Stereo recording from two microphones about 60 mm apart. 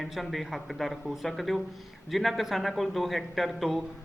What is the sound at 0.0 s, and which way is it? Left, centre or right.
Speech, centre.